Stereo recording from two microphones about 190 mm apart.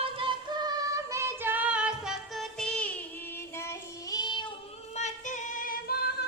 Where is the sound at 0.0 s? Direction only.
25° right (ahead or behind); by 4.5 s 25° left (ahead or behind).